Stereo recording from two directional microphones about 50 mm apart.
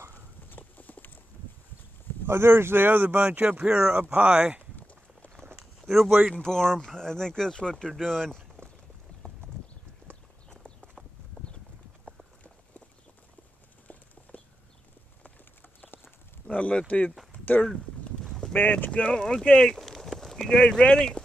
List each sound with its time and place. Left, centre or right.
0.1 s clip-clop: left
2.2 s speech: right
3.3 s speech: right
3.6 s speech: centre
5.8 s speech: centre
6.4 s speech: centre
8.6 s run: left
9.2 s clip-clop: left
14.3 s clip-clop: left
16.4 s a sound: left
18.2 s a sound: centre
18.5 s speech: left
18.9 s speech: centre
19.8 s speech: centre